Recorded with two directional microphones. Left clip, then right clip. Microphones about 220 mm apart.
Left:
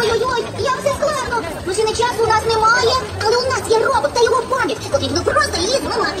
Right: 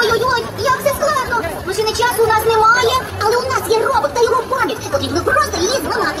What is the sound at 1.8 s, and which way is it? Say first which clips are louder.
Chatter: even; 55° right (ahead or behind).